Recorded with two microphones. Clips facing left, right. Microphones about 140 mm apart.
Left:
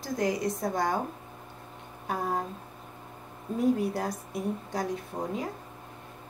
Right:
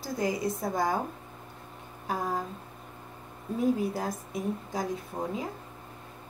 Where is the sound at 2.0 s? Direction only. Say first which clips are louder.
Left 1 dB; centre (ahead or behind).